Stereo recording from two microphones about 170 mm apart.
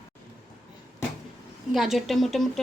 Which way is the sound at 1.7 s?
Centre (ahead or behind).